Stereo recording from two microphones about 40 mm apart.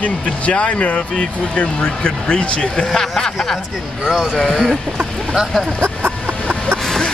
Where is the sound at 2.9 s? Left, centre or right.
Centre.